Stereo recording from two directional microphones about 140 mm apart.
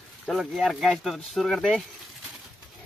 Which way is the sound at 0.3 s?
Centre (ahead or behind).